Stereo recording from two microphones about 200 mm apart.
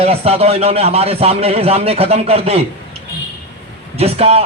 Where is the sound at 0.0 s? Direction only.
30° right (ahead or behind).